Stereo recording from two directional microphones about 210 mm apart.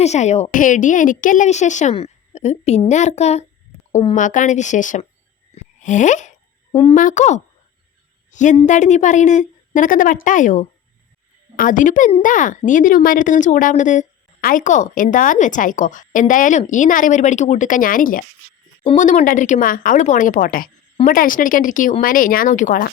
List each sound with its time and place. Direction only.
0.0 s speech: 30° left (ahead or behind)
6.7 s a woman's voice: 20° left (ahead or behind)
6.9 s a woman's voice: 35° left (ahead or behind)
18.8 s speech: 30° left (ahead or behind)